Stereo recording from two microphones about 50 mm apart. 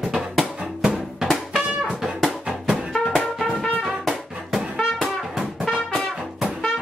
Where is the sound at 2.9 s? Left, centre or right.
Centre.